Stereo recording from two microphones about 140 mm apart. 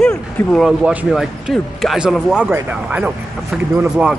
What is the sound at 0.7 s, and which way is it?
A man's voice, 5° right (ahead or behind).